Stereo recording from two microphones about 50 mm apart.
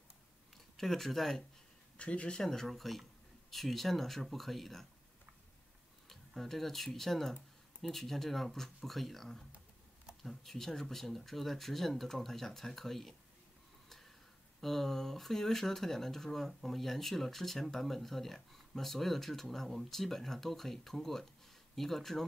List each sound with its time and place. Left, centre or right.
0.7 s speech: centre
2.0 s speech: left
2.4 s speech: centre
6.0 s speech: centre
13.8 s a sound: centre
14.6 s speech: centre